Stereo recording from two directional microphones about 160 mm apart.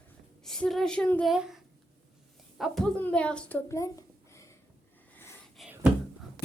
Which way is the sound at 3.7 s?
20° left (ahead or behind).